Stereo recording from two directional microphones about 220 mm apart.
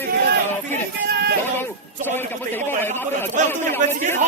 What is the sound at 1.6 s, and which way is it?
Speech, 10° left (ahead or behind).